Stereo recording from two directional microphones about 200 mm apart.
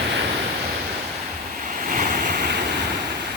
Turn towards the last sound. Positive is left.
turn(degrees=-45)  # may be behind; listen again after turning